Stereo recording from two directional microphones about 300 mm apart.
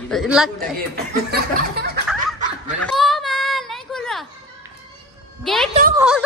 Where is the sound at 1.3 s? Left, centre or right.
Right.